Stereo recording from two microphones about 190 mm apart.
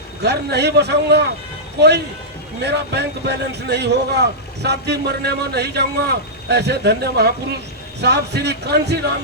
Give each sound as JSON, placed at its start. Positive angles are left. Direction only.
{"t": 0.2, "sound": "speech", "side_deg": -60}
{"t": 2.6, "sound": "speech", "side_deg": -60}